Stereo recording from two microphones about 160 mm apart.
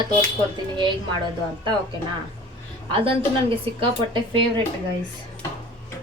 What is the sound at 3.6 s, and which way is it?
Speech, 30° right (ahead or behind).